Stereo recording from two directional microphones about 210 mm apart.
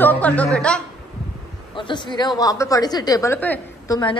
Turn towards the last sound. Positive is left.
turn(degrees=10)  # may be behind; listen again after turning